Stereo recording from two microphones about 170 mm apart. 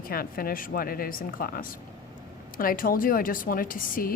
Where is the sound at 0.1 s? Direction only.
60° left (ahead or behind).